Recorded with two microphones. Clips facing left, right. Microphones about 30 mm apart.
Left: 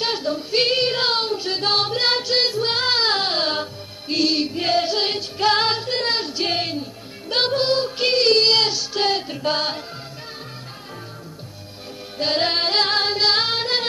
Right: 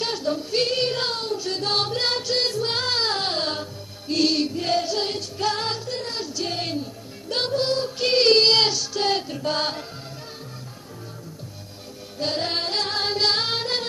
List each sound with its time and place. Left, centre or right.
0.0 s female singing: left
1.1 s child singing: left
4.2 s music: centre
4.5 s music: left
5.5 s music: left
6.3 s a sound: left
6.6 s music: left
8.1 s child singing: centre
9.0 s music: left
12.2 s music: left
13.0 s female singing: left